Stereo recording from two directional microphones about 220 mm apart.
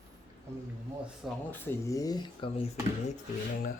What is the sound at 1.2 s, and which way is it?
Speech, 10° left (ahead or behind).